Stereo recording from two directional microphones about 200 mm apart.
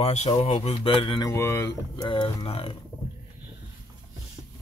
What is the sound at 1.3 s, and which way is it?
Speech, 15° left (ahead or behind).